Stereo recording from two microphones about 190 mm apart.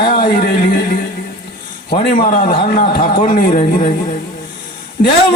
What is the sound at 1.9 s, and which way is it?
Speech, 30° left (ahead or behind).